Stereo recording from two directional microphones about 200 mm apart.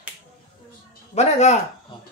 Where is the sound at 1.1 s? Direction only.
35° left (ahead or behind).